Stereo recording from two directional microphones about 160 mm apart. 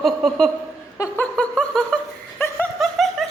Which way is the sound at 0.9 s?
20° left (ahead or behind).